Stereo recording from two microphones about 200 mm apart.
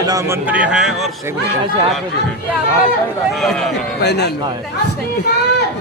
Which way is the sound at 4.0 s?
55° left (ahead or behind).